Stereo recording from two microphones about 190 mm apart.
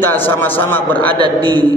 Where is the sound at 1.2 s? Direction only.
25° right (ahead or behind).